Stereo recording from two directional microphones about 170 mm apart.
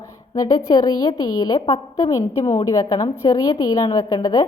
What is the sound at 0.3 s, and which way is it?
A woman's voice, 20° left (ahead or behind).